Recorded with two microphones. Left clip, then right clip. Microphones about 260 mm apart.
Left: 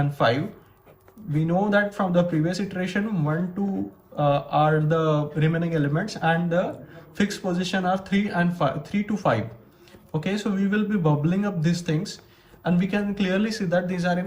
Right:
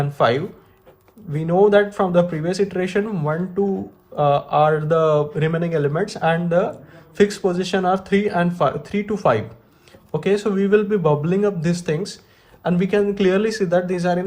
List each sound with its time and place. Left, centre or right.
0.0 s speech: right
1.5 s speech: right